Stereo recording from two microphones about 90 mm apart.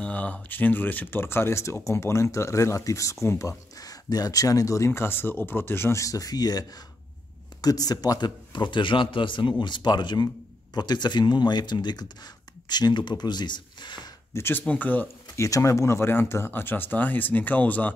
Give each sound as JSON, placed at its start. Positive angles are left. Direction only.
{"t": 0.0, "sound": "speech", "side_deg": 15}
{"t": 7.6, "sound": "speech", "side_deg": 45}
{"t": 14.3, "sound": "speech", "side_deg": 25}
{"t": 14.6, "sound": "speech", "side_deg": 15}
{"t": 15.3, "sound": "speech", "side_deg": 35}